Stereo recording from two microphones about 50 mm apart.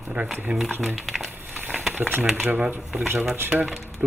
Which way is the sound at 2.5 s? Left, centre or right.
Right.